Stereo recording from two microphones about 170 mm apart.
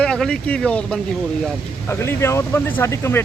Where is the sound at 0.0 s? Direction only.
5° left (ahead or behind).